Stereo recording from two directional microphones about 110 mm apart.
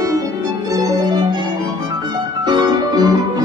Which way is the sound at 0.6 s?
35° right (ahead or behind).